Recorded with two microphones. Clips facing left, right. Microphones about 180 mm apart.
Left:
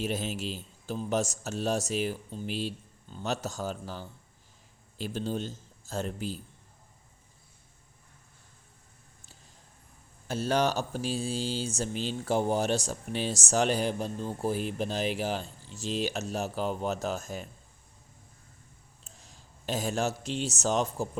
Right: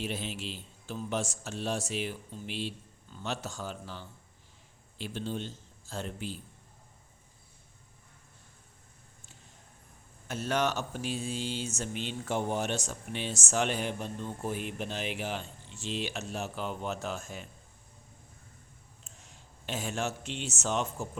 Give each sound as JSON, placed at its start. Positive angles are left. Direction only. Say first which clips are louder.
{"t": 0.0, "sound": "speech", "louder": "left 4 dB", "side_deg": 45}
{"t": 10.2, "sound": "speech", "louder": "left 3 dB", "side_deg": 30}
{"t": 19.0, "sound": "speech", "louder": "left 1 dB", "side_deg": 35}